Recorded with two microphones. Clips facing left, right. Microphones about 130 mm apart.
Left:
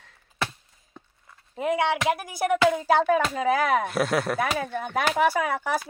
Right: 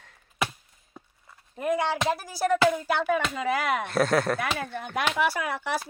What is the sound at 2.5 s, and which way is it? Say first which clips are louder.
Speech: left 1 dB; 20° left (ahead or behind).